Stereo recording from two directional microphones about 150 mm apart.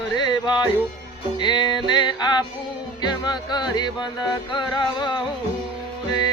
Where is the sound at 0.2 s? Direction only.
30° left (ahead or behind).